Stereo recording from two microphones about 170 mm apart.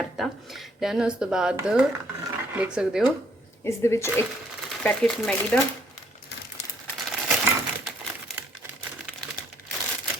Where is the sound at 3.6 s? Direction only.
15° left (ahead or behind).